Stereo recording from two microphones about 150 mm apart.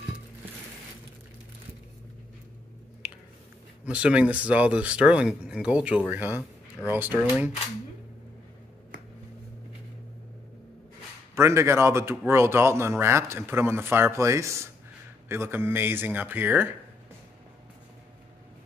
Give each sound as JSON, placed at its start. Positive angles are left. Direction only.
{"t": 3.8, "sound": "speech", "side_deg": -5}
{"t": 11.3, "sound": "speech", "side_deg": -20}